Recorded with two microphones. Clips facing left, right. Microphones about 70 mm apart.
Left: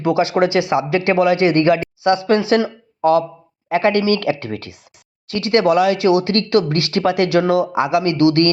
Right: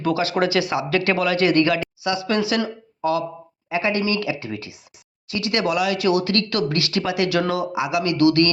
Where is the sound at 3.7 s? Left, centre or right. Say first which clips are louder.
Left 6 dB; left.